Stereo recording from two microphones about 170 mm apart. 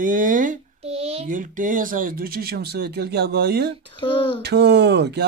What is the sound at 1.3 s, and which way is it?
Speech, 50° right (ahead or behind).